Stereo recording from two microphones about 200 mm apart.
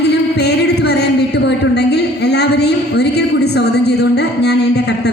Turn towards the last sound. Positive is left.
turn(degrees=55)  # may be behind; listen again after turning